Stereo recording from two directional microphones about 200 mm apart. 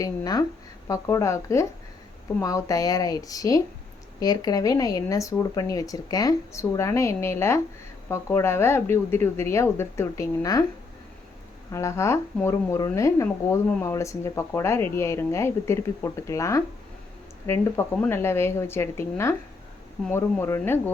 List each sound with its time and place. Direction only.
0.0 s a woman's voice: 20° left (ahead or behind)
11.7 s speech: 15° left (ahead or behind)